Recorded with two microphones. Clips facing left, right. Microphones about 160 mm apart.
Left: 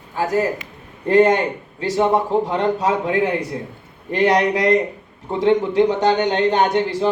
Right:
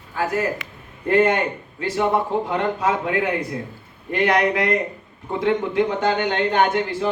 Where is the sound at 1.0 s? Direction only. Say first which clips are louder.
Left 4 dB; 35° left (ahead or behind).